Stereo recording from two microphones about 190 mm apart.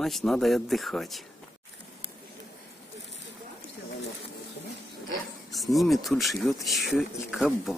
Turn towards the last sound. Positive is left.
turn(degrees=0)  # may be behind; listen again after turning